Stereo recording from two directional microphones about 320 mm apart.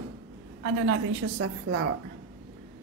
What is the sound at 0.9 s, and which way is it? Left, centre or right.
A woman's voice, right.